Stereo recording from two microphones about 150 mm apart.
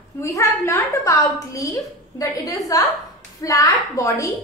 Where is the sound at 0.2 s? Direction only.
20° left (ahead or behind).